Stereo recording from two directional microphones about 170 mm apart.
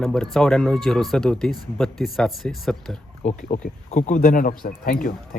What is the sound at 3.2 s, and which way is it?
Speech, 45° left (ahead or behind).